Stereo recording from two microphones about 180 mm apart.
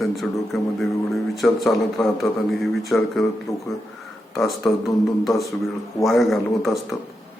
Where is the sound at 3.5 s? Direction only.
20° left (ahead or behind).